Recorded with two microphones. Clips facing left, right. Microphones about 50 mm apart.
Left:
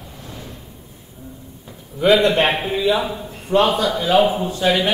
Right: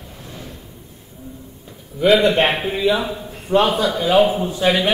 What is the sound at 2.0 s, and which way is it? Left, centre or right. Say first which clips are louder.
A man's voice: even; centre.